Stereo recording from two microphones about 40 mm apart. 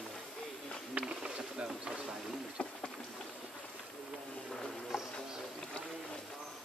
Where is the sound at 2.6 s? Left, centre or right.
Left.